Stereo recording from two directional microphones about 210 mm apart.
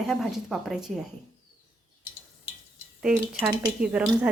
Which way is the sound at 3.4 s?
20° right (ahead or behind).